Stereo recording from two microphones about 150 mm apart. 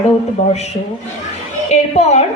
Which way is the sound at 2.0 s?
45° left (ahead or behind).